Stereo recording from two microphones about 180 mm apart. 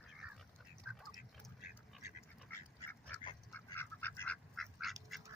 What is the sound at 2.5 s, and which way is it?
Duck, 10° left (ahead or behind).